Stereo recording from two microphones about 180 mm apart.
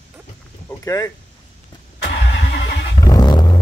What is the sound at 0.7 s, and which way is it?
Vehicle, 20° left (ahead or behind).